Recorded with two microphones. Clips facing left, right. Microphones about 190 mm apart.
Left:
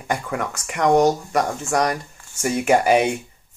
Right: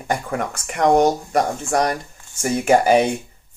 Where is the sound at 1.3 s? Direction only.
30° right (ahead or behind).